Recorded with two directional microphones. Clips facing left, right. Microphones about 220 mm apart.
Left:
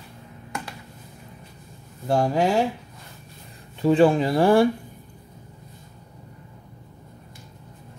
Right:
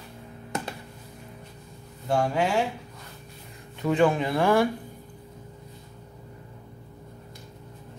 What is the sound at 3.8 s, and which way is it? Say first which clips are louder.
Speech: left 5 dB; 30° left (ahead or behind).